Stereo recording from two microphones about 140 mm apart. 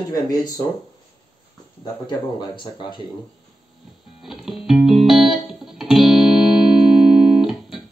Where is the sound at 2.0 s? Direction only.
35° left (ahead or behind).